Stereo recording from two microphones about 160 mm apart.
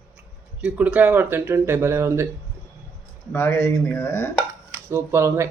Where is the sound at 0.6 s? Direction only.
5° right (ahead or behind).